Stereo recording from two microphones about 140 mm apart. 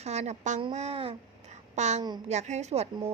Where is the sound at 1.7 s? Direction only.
55° right (ahead or behind).